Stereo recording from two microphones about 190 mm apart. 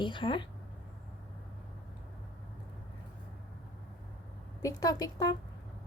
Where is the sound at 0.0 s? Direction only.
25° left (ahead or behind).